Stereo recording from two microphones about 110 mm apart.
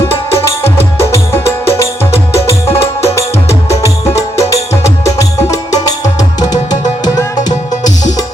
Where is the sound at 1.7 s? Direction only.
25° left (ahead or behind).